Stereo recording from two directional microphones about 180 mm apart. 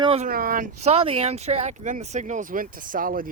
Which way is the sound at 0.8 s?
35° right (ahead or behind).